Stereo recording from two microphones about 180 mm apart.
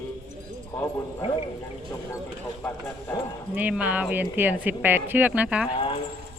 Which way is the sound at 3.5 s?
10° right (ahead or behind).